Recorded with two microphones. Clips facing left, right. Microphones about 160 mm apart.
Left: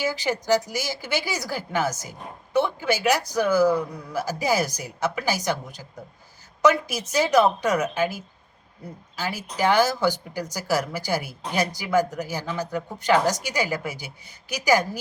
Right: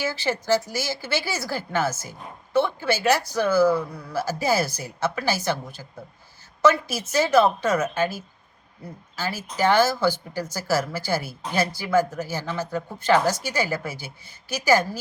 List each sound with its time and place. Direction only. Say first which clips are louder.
0.0 s speech: left 1 dB; 15° left (ahead or behind)